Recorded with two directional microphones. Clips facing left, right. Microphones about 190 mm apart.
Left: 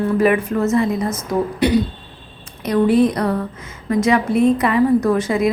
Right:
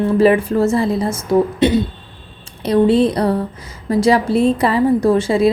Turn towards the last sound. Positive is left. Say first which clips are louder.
# right 3 dB
turn(degrees=-30)  # may be behind; listen again after turning